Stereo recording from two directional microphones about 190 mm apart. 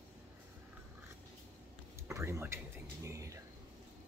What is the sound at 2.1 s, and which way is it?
Speech, 15° right (ahead or behind).